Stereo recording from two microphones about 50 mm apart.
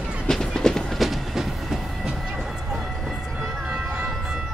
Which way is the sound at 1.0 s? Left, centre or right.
Centre.